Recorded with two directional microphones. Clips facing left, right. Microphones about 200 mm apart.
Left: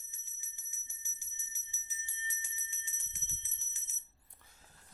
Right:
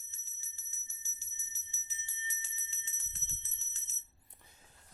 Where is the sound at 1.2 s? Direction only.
15° left (ahead or behind).